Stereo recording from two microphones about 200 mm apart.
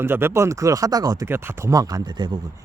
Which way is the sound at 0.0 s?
10° right (ahead or behind).